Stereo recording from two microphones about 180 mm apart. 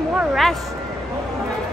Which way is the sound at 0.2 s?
Centre (ahead or behind).